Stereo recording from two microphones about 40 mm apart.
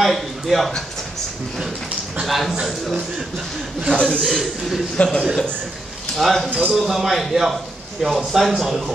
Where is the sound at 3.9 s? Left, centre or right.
Left.